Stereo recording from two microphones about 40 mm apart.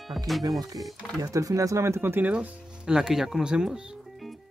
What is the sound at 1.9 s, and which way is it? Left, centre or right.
Speech, right.